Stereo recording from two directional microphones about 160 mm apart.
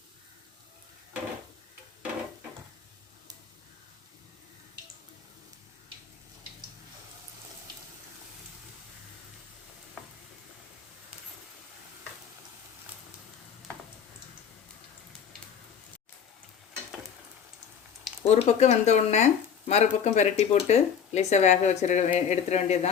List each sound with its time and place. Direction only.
18.3 s speech: 45° left (ahead or behind)